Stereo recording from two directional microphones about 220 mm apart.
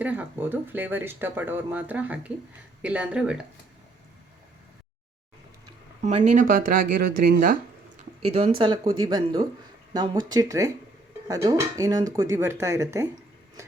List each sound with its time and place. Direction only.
0.0 s speech: 5° right (ahead or behind)
6.0 s speech: 30° right (ahead or behind)
8.2 s speech: 30° right (ahead or behind)